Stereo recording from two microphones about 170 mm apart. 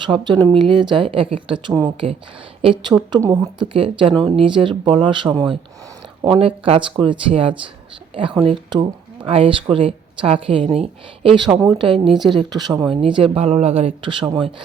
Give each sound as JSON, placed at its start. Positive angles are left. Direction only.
{"t": 0.0, "sound": "speech", "side_deg": -25}
{"t": 3.1, "sound": "speech", "side_deg": -20}